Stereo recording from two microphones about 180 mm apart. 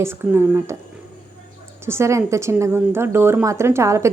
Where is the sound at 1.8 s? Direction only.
15° right (ahead or behind).